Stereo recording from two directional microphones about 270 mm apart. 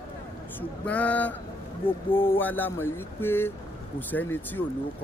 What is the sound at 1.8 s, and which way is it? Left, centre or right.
Speech, centre.